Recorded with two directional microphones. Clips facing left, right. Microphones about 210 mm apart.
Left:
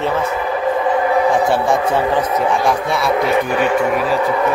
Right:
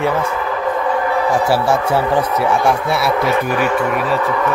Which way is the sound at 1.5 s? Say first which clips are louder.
Even; 5° right (ahead or behind).